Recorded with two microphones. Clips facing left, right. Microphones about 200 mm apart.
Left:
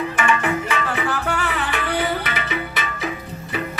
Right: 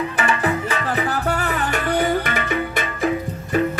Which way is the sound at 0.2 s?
35° right (ahead or behind).